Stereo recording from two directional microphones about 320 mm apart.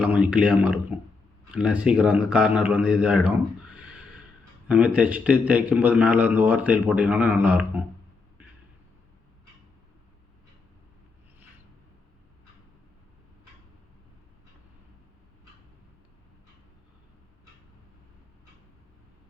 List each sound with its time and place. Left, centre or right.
0.0 s a man's voice: centre
3.8 s gasp: centre
4.7 s a man's voice: centre